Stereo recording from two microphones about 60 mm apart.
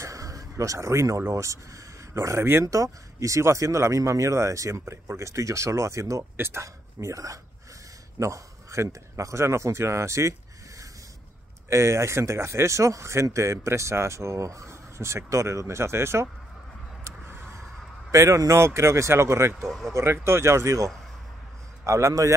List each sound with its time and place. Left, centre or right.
0.0 s a sound: right
1.3 s speech: right
2.6 s speech: right
6.3 s speech: right
6.6 s speech: right
11.7 s speech: right
17.0 s vehicle: right
18.1 s speech: right
19.6 s speech: centre
19.9 s speech: right